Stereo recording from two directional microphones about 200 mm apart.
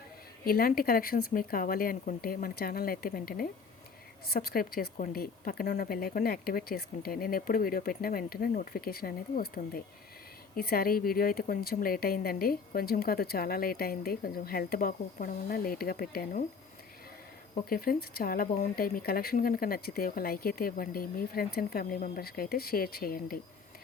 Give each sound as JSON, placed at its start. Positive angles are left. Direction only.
{"t": 0.4, "sound": "speech", "side_deg": 45}
{"t": 17.5, "sound": "speech", "side_deg": 45}